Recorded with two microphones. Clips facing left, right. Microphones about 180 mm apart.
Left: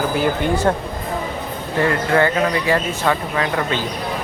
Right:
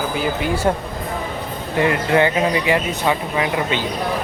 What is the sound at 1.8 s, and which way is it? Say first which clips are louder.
Speech: even; 20° right (ahead or behind).